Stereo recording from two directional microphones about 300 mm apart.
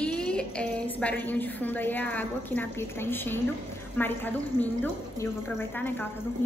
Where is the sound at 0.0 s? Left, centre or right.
Centre.